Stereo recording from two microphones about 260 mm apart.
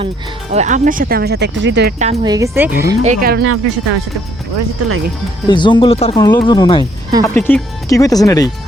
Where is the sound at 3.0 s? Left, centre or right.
Right.